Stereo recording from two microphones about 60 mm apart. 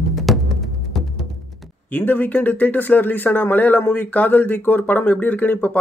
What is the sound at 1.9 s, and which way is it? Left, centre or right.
Speech, left.